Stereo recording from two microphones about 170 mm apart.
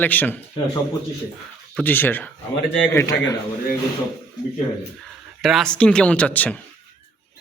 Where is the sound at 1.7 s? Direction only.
10° left (ahead or behind).